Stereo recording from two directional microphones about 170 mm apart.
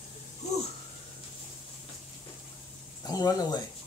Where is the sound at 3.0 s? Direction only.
20° left (ahead or behind).